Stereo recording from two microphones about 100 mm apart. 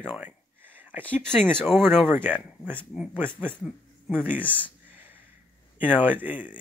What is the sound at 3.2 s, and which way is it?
Speech, 20° right (ahead or behind).